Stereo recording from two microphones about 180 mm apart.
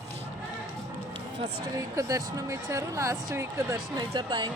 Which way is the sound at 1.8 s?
20° right (ahead or behind).